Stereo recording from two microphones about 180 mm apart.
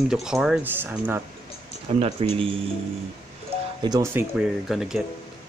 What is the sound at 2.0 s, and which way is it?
Speech, 35° right (ahead or behind).